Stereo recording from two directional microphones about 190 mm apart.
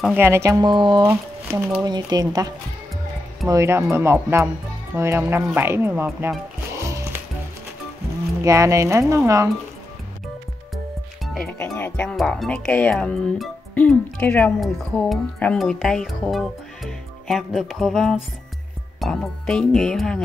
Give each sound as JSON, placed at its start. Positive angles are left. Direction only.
{"t": 0.0, "sound": "speech", "side_deg": -10}
{"t": 6.8, "sound": "music", "side_deg": -15}
{"t": 8.4, "sound": "speech", "side_deg": -15}
{"t": 11.2, "sound": "music", "side_deg": 0}
{"t": 11.5, "sound": "speech", "side_deg": 10}